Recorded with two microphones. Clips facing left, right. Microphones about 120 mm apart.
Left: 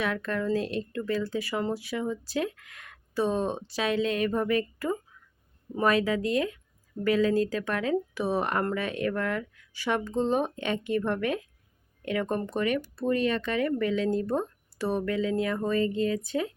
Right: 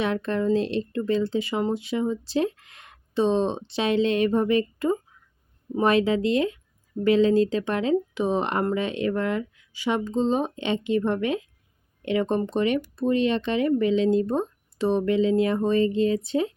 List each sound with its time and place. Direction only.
0.0 s speech: 25° right (ahead or behind)